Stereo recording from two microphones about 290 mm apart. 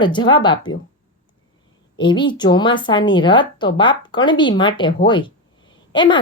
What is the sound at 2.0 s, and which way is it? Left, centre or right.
A woman's voice, centre.